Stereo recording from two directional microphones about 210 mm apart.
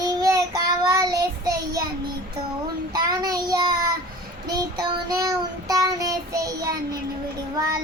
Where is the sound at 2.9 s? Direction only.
20° right (ahead or behind).